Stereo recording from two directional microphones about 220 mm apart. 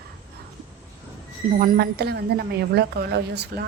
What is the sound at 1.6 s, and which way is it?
A woman's voice, 40° right (ahead or behind).